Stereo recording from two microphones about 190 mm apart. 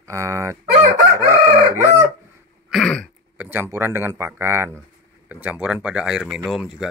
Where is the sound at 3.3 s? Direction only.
10° right (ahead or behind).